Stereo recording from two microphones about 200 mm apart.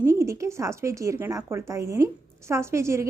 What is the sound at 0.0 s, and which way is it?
A woman's voice, 15° right (ahead or behind).